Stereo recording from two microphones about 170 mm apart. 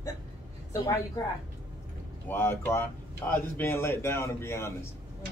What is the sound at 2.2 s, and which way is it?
Speech, 10° left (ahead or behind).